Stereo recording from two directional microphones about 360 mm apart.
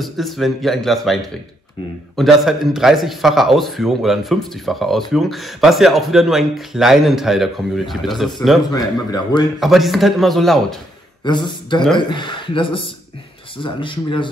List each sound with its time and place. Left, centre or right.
0.0 s speech: centre
8.7 s speech: centre
9.6 s speech: centre
11.2 s speech: centre